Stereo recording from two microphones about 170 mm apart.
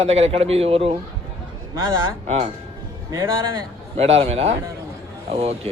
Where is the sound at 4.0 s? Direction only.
35° right (ahead or behind).